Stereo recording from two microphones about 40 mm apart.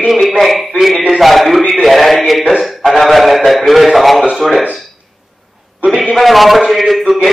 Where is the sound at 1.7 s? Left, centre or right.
Centre.